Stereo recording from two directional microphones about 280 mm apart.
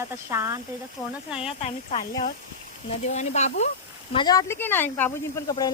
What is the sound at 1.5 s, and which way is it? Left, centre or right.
Speech, left.